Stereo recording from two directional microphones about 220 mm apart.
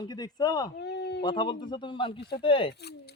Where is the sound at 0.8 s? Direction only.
50° left (ahead or behind).